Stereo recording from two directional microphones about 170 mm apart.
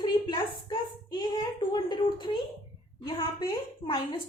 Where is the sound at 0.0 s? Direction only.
25° left (ahead or behind).